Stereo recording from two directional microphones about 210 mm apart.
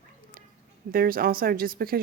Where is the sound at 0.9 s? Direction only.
45° right (ahead or behind).